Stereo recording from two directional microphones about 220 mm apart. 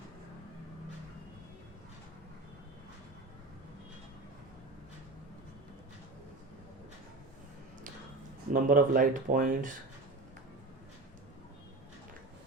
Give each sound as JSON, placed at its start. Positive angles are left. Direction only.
{"t": 8.5, "sound": "speech", "side_deg": -40}